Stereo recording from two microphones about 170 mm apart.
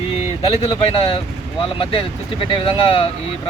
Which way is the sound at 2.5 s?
30° left (ahead or behind).